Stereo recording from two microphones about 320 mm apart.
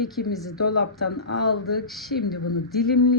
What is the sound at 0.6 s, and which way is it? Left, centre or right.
Speech, left.